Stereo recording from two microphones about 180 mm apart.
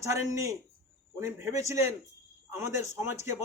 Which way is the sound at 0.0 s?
15° right (ahead or behind).